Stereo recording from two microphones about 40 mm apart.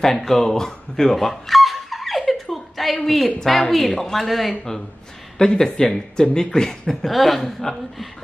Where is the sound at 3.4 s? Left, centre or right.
Centre.